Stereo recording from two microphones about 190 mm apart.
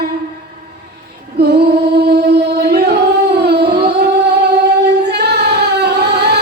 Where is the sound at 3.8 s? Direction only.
60° right (ahead or behind).